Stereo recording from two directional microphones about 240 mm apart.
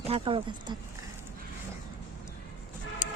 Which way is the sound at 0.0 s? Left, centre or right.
Right.